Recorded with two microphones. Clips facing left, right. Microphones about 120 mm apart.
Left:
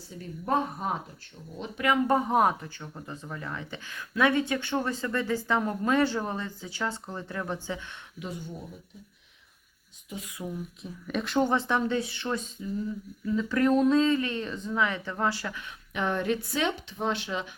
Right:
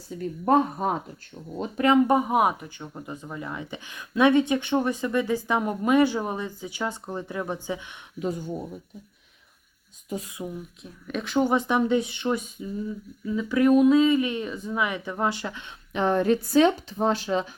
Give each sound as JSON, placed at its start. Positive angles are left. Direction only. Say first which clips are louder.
{"t": 0.4, "sound": "speech", "louder": "right 6 dB", "side_deg": -45}
{"t": 2.0, "sound": "speech", "louder": "right 2 dB", "side_deg": -10}
{"t": 8.2, "sound": "speech", "louder": "right 9 dB", "side_deg": -45}
{"t": 10.1, "sound": "speech", "louder": "right 7 dB", "side_deg": -40}
{"t": 10.4, "sound": "speech", "louder": "right 1 dB", "side_deg": 0}
{"t": 11.4, "sound": "speech", "louder": "right 4 dB", "side_deg": -15}